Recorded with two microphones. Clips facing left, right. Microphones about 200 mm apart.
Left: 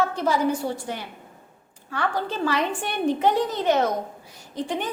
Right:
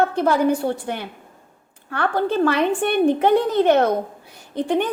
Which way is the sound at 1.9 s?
60° right (ahead or behind).